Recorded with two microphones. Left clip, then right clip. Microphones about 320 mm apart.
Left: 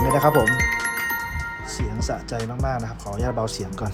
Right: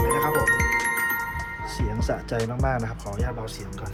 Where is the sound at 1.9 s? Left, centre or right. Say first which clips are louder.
Right 1 dB; centre.